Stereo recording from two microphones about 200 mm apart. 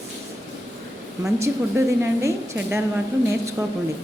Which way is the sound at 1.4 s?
15° right (ahead or behind).